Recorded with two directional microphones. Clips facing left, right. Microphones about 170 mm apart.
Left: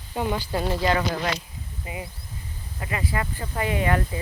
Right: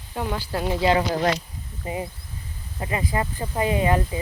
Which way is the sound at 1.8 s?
35° right (ahead or behind).